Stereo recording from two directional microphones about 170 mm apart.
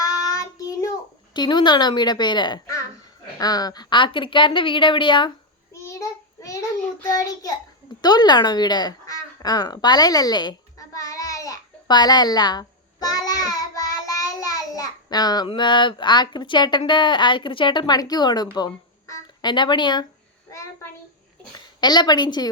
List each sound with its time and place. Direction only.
0.0 s child singing: 20° left (ahead or behind)
1.3 s a woman's voice: 25° left (ahead or behind)
5.7 s child singing: 20° left (ahead or behind)
8.0 s a sound: 25° left (ahead or behind)
14.2 s child singing: 20° left (ahead or behind)
18.5 s speech: 20° left (ahead or behind)
21.8 s a woman's voice: 25° left (ahead or behind)